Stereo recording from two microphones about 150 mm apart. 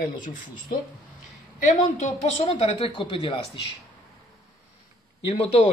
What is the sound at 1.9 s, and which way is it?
A woman's voice, 45° left (ahead or behind).